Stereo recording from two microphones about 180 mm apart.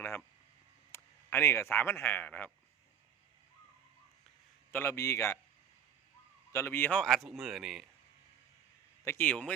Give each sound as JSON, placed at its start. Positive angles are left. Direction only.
{"t": 0.9, "sound": "speech", "side_deg": 15}
{"t": 4.7, "sound": "a man's voice", "side_deg": 15}
{"t": 6.5, "sound": "a man's voice", "side_deg": 15}
{"t": 9.0, "sound": "a man's voice", "side_deg": 10}